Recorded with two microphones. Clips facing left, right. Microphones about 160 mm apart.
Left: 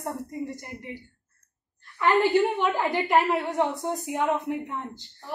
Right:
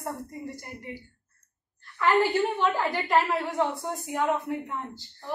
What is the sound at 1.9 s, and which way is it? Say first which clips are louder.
A woman's voice: left 2 dB; 20° left (ahead or behind).